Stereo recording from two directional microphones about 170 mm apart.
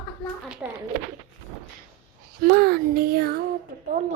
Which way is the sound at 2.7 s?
65° right (ahead or behind).